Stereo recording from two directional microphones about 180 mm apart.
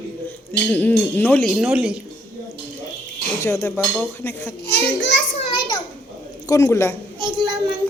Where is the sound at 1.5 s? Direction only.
5° right (ahead or behind).